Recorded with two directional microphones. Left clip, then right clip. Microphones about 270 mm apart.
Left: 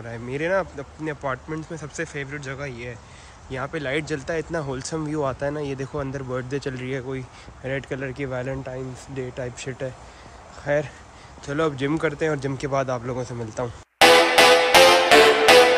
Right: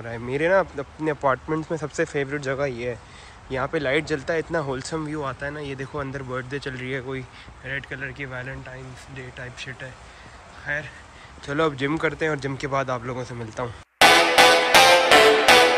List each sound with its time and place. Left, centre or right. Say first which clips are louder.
0.0 s speech: right 3 dB; centre; by 10.9 s left
11.4 s speech: right 1 dB; centre
13.9 s music: left 1 dB; centre